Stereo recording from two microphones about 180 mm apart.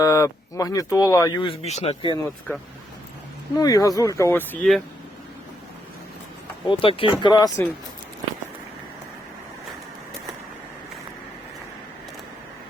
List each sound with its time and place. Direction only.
0.0 s speech: 15° left (ahead or behind); by 2.1 s 30° left (ahead or behind)
3.6 s speech: 20° left (ahead or behind)
6.7 s speech: 30° left (ahead or behind)